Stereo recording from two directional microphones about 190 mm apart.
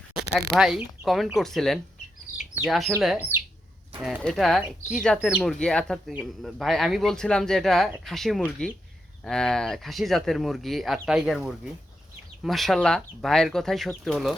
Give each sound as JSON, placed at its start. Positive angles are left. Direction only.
{"t": 0.3, "sound": "speech", "side_deg": 0}
{"t": 2.3, "sound": "chicken", "side_deg": 45}
{"t": 2.6, "sound": "speech", "side_deg": 0}